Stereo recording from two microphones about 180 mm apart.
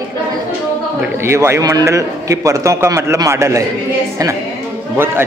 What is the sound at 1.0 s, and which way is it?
A man's voice, 15° right (ahead or behind).